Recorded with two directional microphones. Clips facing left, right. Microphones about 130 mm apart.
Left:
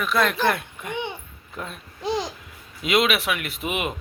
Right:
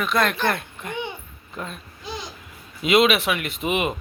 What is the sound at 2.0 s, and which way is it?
Babbling, 75° left (ahead or behind).